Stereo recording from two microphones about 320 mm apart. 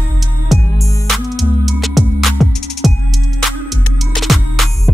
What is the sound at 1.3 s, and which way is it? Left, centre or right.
Music, centre.